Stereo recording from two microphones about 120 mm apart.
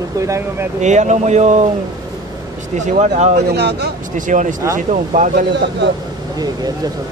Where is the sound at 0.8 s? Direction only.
80° right.